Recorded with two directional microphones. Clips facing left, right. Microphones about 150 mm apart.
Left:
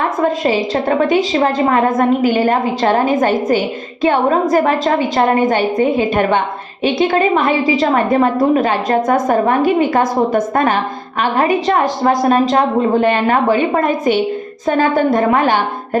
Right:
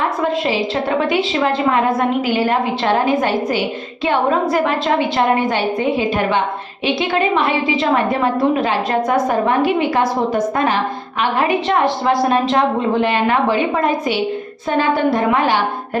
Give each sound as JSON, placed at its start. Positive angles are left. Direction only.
{"t": 0.2, "sound": "a woman's voice", "side_deg": 45}